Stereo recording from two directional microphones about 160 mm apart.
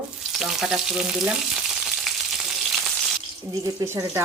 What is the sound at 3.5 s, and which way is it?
Speech, 20° right (ahead or behind).